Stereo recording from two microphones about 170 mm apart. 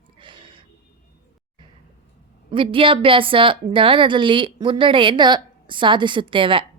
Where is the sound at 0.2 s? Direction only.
30° right (ahead or behind).